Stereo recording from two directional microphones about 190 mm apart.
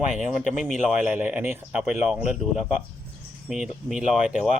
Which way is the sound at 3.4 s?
5° right (ahead or behind).